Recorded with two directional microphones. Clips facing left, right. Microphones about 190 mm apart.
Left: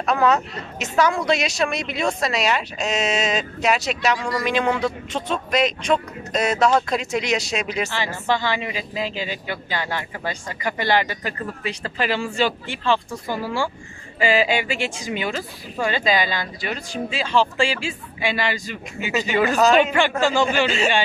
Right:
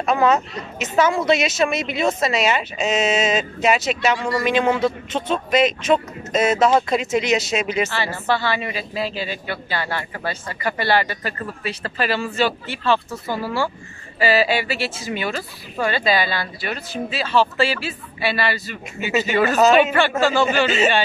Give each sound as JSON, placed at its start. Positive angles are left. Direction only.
{"t": 0.0, "sound": "speech", "side_deg": 0}
{"t": 7.9, "sound": "speech", "side_deg": 15}
{"t": 19.5, "sound": "speech", "side_deg": 0}
{"t": 19.9, "sound": "speech", "side_deg": 15}
{"t": 20.6, "sound": "speech", "side_deg": 0}